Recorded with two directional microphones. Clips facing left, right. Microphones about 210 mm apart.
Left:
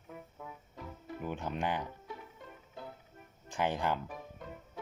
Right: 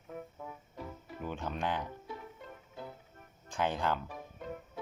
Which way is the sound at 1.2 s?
15° left (ahead or behind).